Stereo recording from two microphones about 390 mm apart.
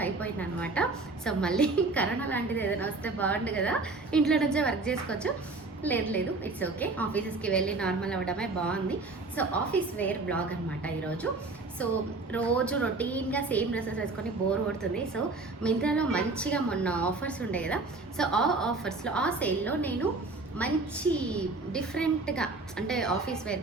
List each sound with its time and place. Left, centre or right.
0.0 s a woman's voice: centre
11.8 s a woman's voice: centre
15.6 s a woman's voice: centre